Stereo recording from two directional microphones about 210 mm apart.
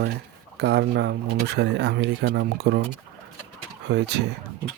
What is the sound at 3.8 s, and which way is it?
Speech, 55° right (ahead or behind).